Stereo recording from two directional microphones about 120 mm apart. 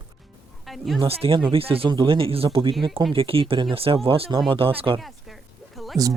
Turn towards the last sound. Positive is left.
turn(degrees=0)  # may be behind; listen again after turning